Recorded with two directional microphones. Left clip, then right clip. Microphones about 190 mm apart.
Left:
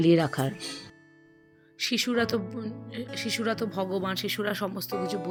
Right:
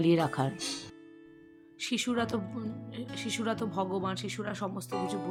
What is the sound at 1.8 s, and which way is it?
Speech, 5° left (ahead or behind).